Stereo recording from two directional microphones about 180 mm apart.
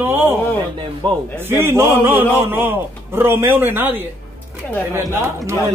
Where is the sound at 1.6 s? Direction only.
15° right (ahead or behind).